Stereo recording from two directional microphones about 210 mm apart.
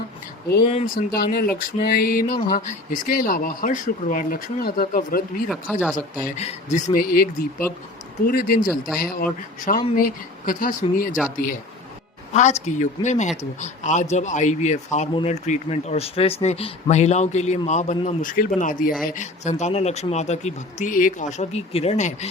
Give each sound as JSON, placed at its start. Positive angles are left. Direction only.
{"t": 0.6, "sound": "speech", "side_deg": 30}
{"t": 0.9, "sound": "speech", "side_deg": 45}
{"t": 6.3, "sound": "speech", "side_deg": 30}
{"t": 8.3, "sound": "speech", "side_deg": 40}
{"t": 12.3, "sound": "speech", "side_deg": 35}